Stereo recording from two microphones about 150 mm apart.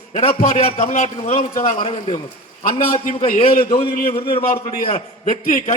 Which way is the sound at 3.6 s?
40° left (ahead or behind).